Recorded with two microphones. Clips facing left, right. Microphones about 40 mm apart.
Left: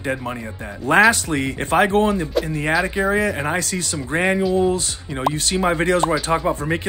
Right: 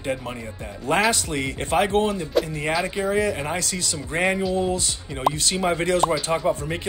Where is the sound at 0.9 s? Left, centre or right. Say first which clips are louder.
Left 6 dB; left.